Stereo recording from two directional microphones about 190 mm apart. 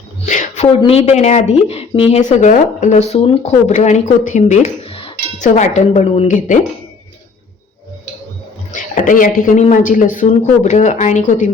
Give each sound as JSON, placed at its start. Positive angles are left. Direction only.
{"t": 0.3, "sound": "a sound", "side_deg": 40}
{"t": 0.8, "sound": "speech", "side_deg": 30}
{"t": 8.7, "sound": "speech", "side_deg": 40}